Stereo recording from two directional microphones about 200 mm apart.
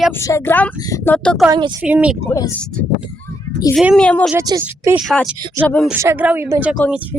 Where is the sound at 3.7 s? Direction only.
5° right (ahead or behind).